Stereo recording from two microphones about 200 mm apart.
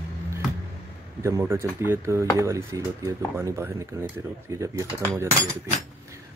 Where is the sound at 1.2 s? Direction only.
15° right (ahead or behind).